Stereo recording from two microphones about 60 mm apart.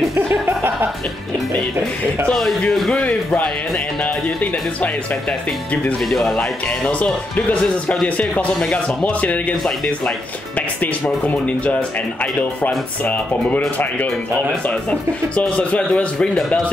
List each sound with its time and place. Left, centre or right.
0.1 s music: right
2.7 s speech: centre; by 4.9 s left
6.0 s speech: centre
6.9 s speech: left
8.5 s speech: centre
10.8 s speech: left